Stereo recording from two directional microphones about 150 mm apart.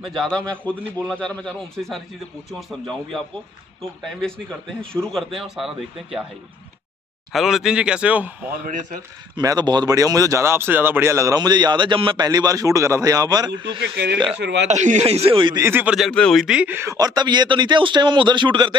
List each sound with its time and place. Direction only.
0.0 s a man's voice: 5° left (ahead or behind)
7.3 s a man's voice: centre (ahead or behind)
9.4 s speech: 25° right (ahead or behind)
13.7 s speech: 90° right
14.7 s speech: 50° right (ahead or behind); by 15.6 s 35° right (ahead or behind)
15.6 s a man's voice: 10° right (ahead or behind)
16.1 s speech: 5° left (ahead or behind); by 18.8 s 30° right (ahead or behind)